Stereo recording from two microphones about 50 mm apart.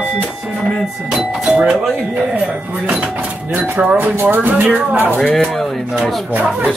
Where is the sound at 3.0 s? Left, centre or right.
Right.